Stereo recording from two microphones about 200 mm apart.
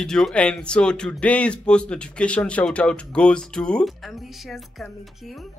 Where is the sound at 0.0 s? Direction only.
5° left (ahead or behind).